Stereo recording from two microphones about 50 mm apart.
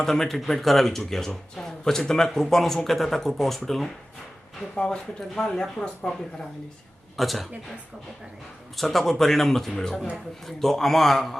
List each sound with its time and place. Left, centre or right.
0.0 s speech: centre
4.7 s speech: left
7.2 s a man's voice: centre
8.7 s a man's voice: centre